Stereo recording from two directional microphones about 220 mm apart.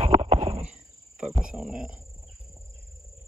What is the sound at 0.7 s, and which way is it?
Cricket, 5° right (ahead or behind).